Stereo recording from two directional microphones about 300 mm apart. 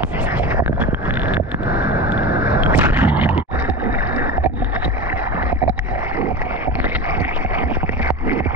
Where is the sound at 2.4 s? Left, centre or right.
Centre.